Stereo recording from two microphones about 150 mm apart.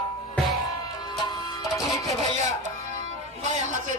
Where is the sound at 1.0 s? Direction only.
30° left (ahead or behind).